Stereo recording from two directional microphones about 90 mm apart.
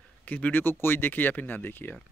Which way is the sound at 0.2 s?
20° left (ahead or behind).